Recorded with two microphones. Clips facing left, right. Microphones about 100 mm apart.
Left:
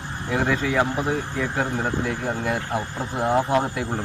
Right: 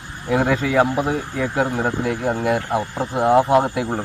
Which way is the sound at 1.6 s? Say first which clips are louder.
Right 5 dB; 35° right (ahead or behind).